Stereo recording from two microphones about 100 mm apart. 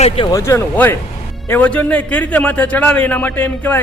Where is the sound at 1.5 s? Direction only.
15° left (ahead or behind).